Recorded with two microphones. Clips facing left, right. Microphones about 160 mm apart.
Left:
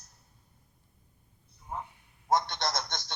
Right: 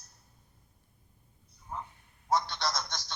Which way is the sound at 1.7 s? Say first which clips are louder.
Left 2 dB; 15° left (ahead or behind).